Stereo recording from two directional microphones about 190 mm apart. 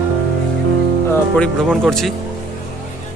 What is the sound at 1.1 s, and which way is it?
Speech, 5° left (ahead or behind).